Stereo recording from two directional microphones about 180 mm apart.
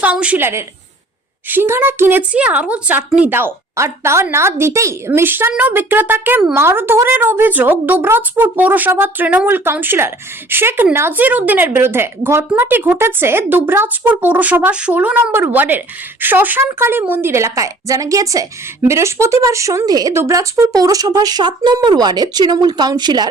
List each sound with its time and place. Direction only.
0.0 s a woman's voice: 5° right (ahead or behind); by 23.3 s 25° right (ahead or behind)